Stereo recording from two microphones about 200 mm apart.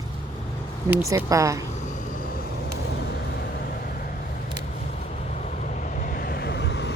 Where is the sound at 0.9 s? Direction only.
15° right (ahead or behind).